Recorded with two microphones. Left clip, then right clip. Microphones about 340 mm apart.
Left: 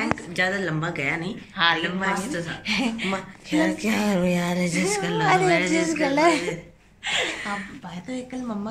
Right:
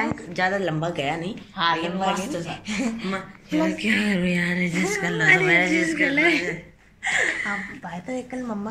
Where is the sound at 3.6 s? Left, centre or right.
Centre.